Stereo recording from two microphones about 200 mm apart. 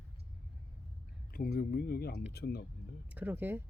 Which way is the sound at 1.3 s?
50° left (ahead or behind).